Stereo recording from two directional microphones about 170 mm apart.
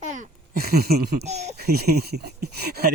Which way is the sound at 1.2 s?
40° right (ahead or behind).